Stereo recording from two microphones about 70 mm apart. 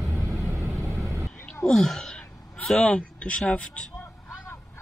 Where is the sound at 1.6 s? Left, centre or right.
Centre.